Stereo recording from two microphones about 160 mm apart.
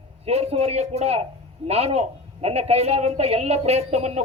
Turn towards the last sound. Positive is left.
turn(degrees=-45)  # may be behind; listen again after turning